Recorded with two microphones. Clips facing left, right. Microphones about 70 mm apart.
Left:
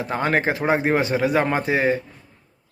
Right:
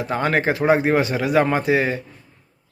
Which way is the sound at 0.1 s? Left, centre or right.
Left.